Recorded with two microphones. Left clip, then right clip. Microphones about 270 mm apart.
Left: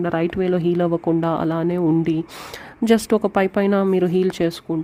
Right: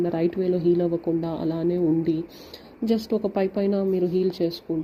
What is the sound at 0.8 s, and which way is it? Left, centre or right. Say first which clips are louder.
Speech: left 5 dB; left.